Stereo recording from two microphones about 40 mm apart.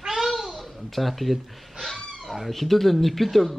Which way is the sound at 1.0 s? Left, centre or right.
Centre.